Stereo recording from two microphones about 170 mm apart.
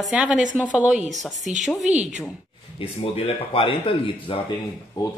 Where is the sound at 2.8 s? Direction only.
35° left (ahead or behind).